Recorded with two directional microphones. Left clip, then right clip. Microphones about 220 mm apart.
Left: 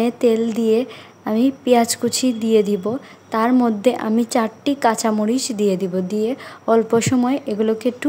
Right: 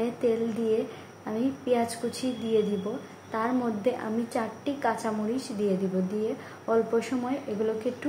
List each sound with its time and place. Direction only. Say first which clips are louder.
0.0 s a woman's voice: left 10 dB; 50° left (ahead or behind)